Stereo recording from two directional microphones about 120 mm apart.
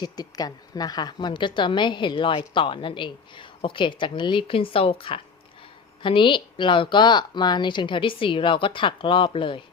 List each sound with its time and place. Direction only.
0.0 s a woman's voice: 35° left (ahead or behind)